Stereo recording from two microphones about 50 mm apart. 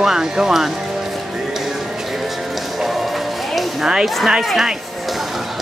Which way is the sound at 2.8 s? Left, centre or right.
Centre.